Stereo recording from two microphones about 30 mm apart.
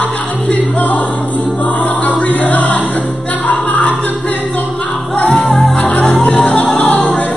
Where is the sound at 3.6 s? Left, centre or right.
Left.